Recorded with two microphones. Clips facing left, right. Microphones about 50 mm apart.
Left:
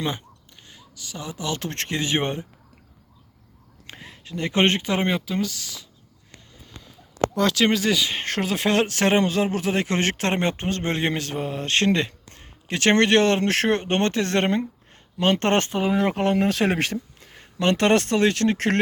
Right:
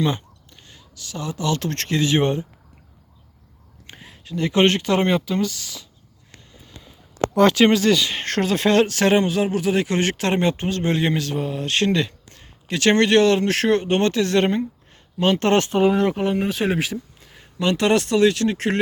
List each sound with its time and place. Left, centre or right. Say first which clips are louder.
0.0 s a man's voice: right 5 dB; centre; by 2.5 s left
3.8 s a sound: right 1 dB; left
4.4 s speech: right 3 dB; left; by 5.8 s centre
7.7 s speech: right 4 dB; centre; by 9.2 s left
9.2 s speech: right 2 dB; left
16.1 s speech: left 1 dB; left